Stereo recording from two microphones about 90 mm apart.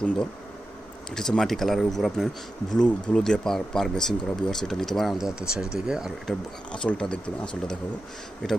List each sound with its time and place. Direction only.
1.1 s speech: 5° left (ahead or behind)
6.7 s speech: 10° left (ahead or behind)